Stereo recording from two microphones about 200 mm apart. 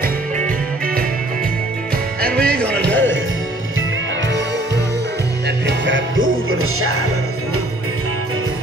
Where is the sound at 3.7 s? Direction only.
70° right (ahead or behind); by 6.9 s 90° right.